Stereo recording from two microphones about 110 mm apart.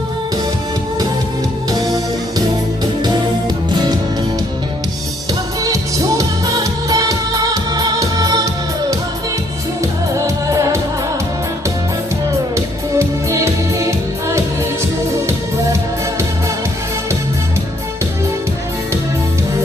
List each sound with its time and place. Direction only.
1.7 s music: 35° right (ahead or behind)
3.0 s music: 40° right (ahead or behind)
5.6 s music: 30° right (ahead or behind)
10.2 s music: 30° right (ahead or behind)
12.5 s music: 25° right (ahead or behind)